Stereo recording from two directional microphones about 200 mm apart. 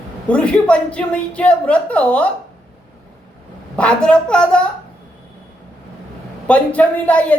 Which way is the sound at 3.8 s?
5° left (ahead or behind).